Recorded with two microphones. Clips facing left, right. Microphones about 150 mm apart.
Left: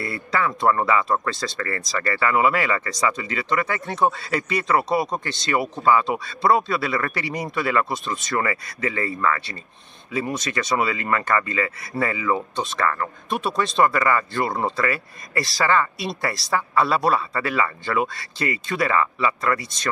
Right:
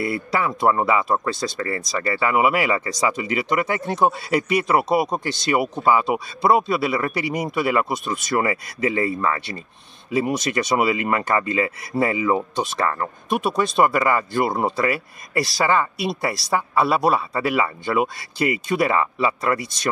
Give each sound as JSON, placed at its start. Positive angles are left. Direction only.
{"t": 0.0, "sound": "speech", "side_deg": -15}
{"t": 13.4, "sound": "a woman's voice", "side_deg": -5}
{"t": 16.8, "sound": "speech", "side_deg": -10}